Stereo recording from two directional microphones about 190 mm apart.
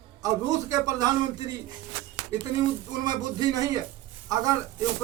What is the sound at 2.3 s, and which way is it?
Speech, 35° left (ahead or behind).